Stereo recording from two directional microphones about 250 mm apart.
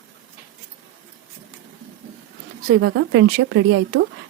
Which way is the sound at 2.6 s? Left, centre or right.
Right.